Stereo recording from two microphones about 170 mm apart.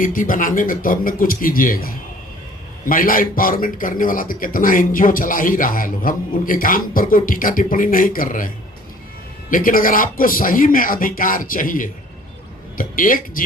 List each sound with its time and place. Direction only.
0.0 s a man's voice: 50° left (ahead or behind)